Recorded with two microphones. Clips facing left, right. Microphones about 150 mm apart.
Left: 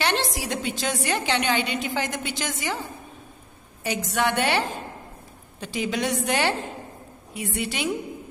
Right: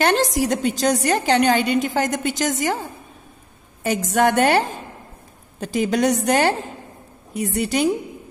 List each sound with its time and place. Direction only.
0.0 s a woman's voice: 45° right (ahead or behind)
3.8 s a woman's voice: 45° right (ahead or behind)